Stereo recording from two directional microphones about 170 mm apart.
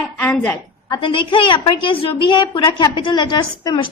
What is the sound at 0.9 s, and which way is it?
A woman's voice, 30° left (ahead or behind).